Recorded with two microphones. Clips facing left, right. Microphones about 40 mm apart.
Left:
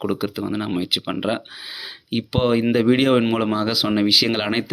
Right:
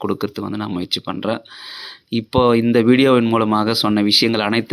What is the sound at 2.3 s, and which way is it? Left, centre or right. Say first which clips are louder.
Speech: right 5 dB; centre.